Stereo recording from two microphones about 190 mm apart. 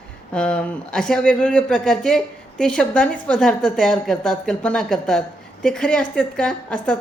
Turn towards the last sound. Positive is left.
turn(degrees=5)  # may be behind; listen again after turning